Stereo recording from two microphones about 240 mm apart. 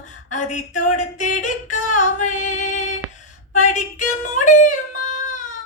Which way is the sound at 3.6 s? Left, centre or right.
Left.